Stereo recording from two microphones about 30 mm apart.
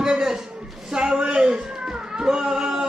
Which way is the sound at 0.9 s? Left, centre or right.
Right.